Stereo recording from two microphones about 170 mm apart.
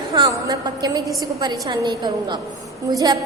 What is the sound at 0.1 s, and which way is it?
A woman's voice, 25° right (ahead or behind).